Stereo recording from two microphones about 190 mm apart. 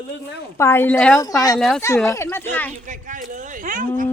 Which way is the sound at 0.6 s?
10° left (ahead or behind).